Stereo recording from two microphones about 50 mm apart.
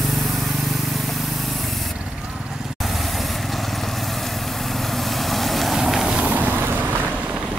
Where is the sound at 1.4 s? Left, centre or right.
Centre.